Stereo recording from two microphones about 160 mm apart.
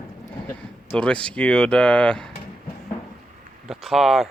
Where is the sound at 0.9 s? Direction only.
5° left (ahead or behind).